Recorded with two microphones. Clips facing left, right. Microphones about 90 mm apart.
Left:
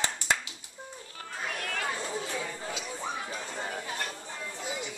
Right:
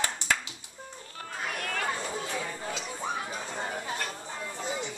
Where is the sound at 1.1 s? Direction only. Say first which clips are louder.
Right 1 dB; centre (ahead or behind).